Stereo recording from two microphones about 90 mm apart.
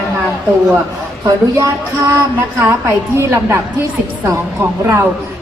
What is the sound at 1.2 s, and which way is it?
Speech, 40° right (ahead or behind).